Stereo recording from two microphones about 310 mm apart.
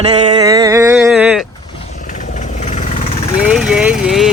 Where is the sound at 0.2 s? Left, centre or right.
Centre.